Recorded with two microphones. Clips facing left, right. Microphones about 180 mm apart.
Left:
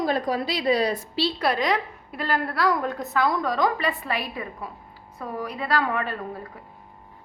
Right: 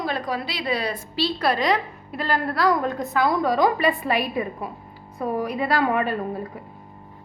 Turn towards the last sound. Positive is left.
turn(degrees=-20)  # may be behind; listen again after turning